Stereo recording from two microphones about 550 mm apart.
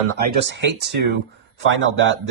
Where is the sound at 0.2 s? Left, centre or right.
Centre.